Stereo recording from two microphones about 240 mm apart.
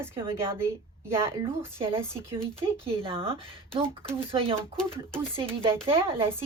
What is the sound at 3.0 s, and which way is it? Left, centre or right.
Speech, right.